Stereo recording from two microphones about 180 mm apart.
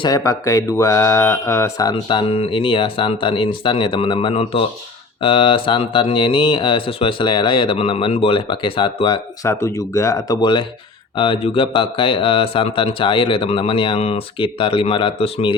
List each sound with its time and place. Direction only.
0.0 s speech: 20° left (ahead or behind)
9.5 s speech: 15° left (ahead or behind)